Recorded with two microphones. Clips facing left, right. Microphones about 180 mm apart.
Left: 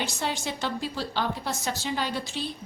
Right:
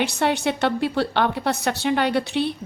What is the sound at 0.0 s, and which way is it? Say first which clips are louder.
A woman's voice: right 9 dB; 65° right (ahead or behind).